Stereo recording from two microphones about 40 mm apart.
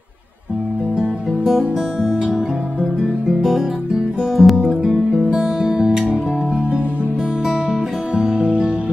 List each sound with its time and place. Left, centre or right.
0.9 s music: centre
3.3 s music: centre
8.1 s music: right